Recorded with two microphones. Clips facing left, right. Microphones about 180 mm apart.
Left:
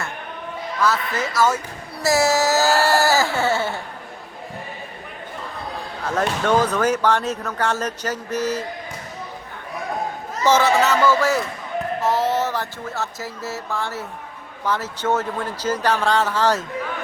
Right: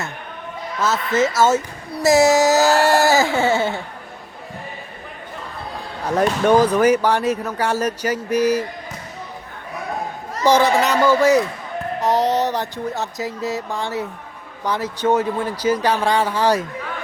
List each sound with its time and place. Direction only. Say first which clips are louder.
0.8 s speech: right 4 dB; 20° right (ahead or behind)
6.1 s speech: right 4 dB; 15° right (ahead or behind)
10.4 s speech: right 2 dB; 15° right (ahead or behind)